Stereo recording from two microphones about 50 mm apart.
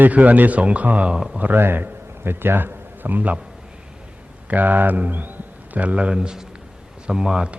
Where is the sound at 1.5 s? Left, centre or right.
Right.